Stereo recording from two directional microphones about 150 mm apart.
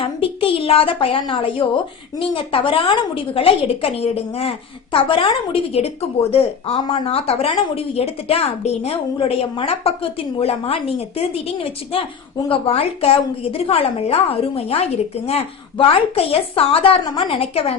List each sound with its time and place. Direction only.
0.0 s a woman's voice: 40° left (ahead or behind)